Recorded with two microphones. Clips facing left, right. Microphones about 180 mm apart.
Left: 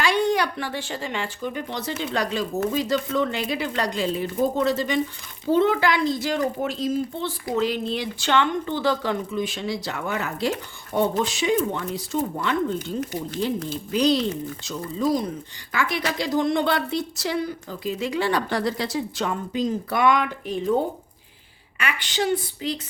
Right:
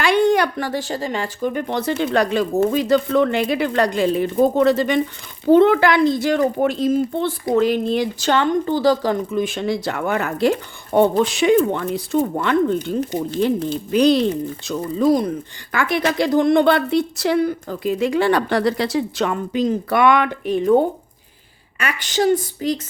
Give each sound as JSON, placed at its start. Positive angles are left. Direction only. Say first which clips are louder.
{"t": 0.0, "sound": "a woman's voice", "louder": "right 6 dB", "side_deg": -55}
{"t": 9.3, "sound": "a woman's voice", "louder": "right 6 dB", "side_deg": -50}
{"t": 21.8, "sound": "speech", "louder": "right 5 dB", "side_deg": -45}